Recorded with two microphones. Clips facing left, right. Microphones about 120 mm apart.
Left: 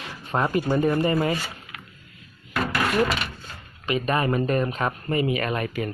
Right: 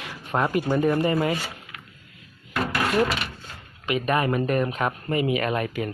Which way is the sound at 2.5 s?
20° right (ahead or behind).